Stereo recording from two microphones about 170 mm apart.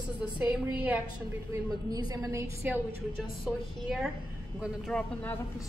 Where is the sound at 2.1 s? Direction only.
20° right (ahead or behind).